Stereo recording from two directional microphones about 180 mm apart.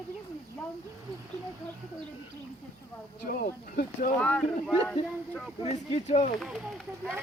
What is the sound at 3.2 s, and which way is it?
Speech, 50° left (ahead or behind).